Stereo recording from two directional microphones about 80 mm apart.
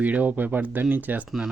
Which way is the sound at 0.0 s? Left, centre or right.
Centre.